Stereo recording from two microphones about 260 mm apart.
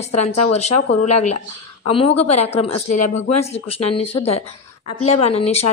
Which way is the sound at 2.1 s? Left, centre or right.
Left.